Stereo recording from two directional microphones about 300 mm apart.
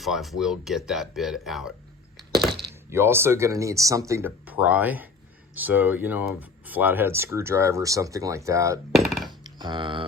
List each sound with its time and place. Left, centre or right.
0.0 s speech: centre
9.0 s a sound: centre
9.4 s speech: centre